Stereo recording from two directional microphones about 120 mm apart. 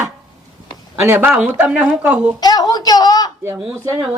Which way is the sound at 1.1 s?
15° right (ahead or behind).